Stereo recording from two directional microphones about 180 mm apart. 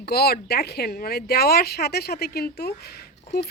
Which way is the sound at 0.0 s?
60° left (ahead or behind).